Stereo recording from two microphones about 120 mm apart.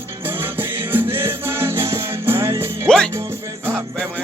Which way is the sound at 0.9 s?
20° right (ahead or behind).